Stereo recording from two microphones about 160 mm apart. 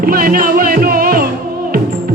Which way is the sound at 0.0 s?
65° right (ahead or behind).